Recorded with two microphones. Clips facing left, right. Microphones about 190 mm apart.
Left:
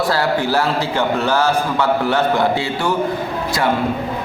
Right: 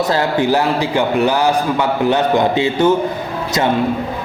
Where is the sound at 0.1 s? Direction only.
20° right (ahead or behind).